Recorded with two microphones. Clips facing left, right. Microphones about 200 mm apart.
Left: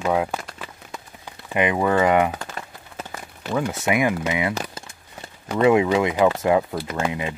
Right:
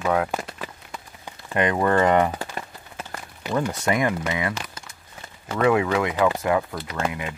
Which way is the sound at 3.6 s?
10° left (ahead or behind).